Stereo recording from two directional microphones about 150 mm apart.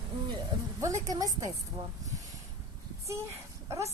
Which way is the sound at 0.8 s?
20° right (ahead or behind).